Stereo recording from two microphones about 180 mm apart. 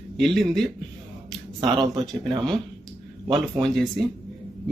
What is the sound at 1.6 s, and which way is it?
Speech, 25° right (ahead or behind).